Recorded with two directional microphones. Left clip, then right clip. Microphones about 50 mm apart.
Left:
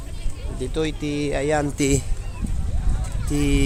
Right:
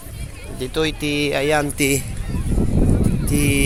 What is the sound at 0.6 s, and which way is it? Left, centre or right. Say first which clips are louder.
Speech: right 4 dB; left.